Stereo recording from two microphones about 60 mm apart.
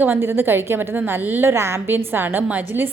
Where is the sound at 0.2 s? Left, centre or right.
Right.